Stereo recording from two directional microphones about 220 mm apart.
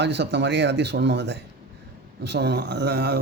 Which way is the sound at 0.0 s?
50° right (ahead or behind).